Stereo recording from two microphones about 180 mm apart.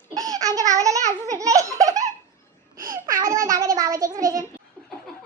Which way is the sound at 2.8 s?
20° right (ahead or behind).